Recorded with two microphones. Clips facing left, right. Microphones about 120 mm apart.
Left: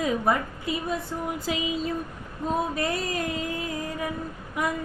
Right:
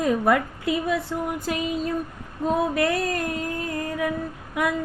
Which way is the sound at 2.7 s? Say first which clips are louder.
Right 5 dB; 70° right (ahead or behind).